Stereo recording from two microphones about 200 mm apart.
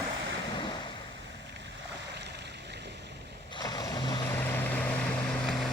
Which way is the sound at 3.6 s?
20° left (ahead or behind).